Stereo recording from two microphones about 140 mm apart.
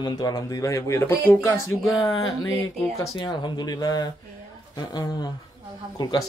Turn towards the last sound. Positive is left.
turn(degrees=30)  # may be behind; listen again after turning